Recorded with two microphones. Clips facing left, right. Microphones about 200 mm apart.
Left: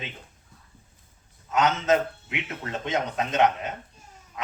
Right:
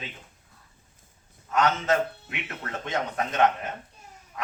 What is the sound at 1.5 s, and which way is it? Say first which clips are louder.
A man's voice: left 2 dB; 20° left (ahead or behind).